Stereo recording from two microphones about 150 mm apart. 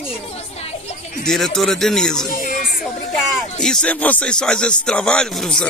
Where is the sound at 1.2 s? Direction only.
5° left (ahead or behind).